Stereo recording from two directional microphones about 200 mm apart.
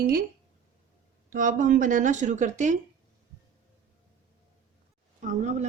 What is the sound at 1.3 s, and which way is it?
Speech, 40° right (ahead or behind).